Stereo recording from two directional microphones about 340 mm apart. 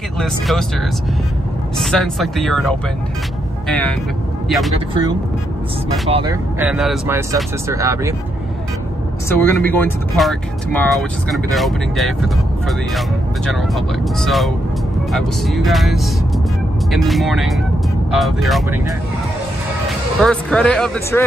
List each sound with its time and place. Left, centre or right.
0.2 s speech: centre
1.8 s speech: centre
6.0 s speech: centre
6.6 s speech: centre
9.3 s speech: centre
13.5 s speech: centre
20.2 s speech: centre